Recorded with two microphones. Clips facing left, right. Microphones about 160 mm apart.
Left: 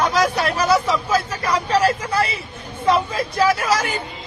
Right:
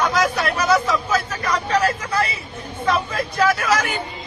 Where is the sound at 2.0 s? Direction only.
30° left (ahead or behind).